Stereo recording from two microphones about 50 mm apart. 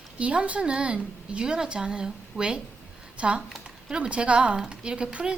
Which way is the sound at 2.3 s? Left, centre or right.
Left.